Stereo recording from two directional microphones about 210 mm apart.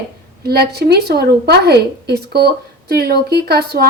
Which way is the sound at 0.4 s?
50° right (ahead or behind).